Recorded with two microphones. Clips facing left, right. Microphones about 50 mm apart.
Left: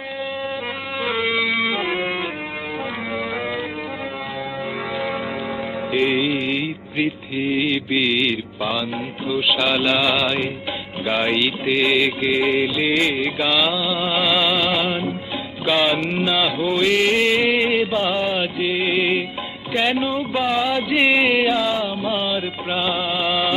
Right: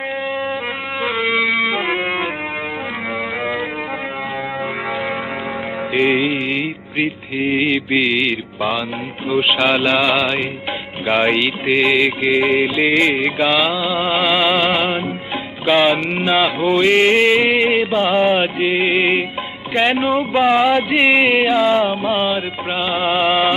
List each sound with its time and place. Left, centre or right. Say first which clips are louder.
1.2 s music: right 4 dB; centre
1.8 s music: right 3 dB; right
5.9 s music: right 3 dB; right
20.9 s music: right 3 dB; centre
22.3 s music: right 3 dB; right